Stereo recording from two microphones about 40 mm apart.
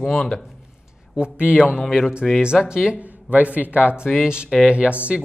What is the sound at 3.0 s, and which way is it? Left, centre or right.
Speech, right.